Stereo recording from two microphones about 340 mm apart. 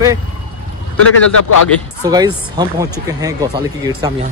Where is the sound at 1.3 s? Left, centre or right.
Left.